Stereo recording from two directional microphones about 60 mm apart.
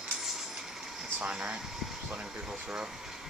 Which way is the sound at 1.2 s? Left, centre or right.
Centre.